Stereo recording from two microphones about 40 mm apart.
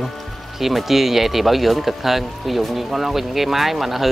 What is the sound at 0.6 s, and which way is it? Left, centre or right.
Speech, centre.